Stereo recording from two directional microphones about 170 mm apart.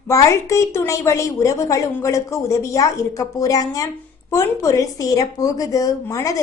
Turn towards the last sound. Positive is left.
turn(degrees=20)  # may be behind; listen again after turning